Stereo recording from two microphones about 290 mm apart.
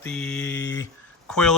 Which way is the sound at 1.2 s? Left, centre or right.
Centre.